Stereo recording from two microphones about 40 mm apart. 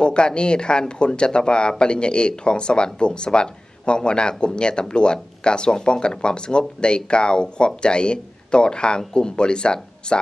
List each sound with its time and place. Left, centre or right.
0.0 s speech: left